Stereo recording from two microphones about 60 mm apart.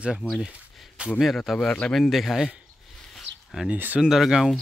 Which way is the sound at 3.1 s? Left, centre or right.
Centre.